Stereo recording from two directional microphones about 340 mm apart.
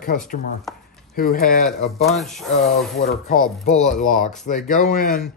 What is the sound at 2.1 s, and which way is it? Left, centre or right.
Speech, centre.